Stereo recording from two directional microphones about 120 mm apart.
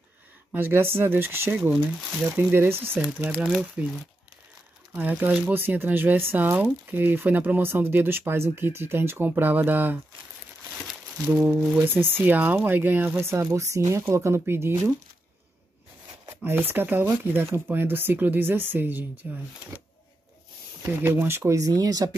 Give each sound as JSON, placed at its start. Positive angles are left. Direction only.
{"t": 0.5, "sound": "speech", "side_deg": -20}
{"t": 1.6, "sound": "speech", "side_deg": -5}
{"t": 2.3, "sound": "speech", "side_deg": -15}
{"t": 4.9, "sound": "speech", "side_deg": -10}
{"t": 11.2, "sound": "speech", "side_deg": -15}
{"t": 16.3, "sound": "speech", "side_deg": -20}
{"t": 20.8, "sound": "speech", "side_deg": -20}